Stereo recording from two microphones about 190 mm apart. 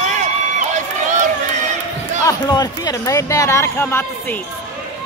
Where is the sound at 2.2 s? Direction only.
20° left (ahead or behind).